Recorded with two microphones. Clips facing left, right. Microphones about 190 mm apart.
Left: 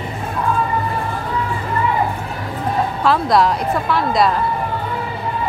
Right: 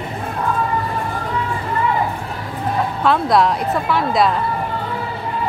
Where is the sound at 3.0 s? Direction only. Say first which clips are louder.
Even; centre (ahead or behind).